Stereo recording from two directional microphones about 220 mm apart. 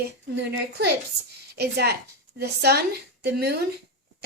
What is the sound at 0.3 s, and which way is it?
A woman's voice, 50° right (ahead or behind).